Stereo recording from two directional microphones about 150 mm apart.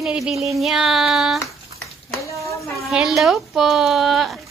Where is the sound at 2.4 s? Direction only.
20° left (ahead or behind).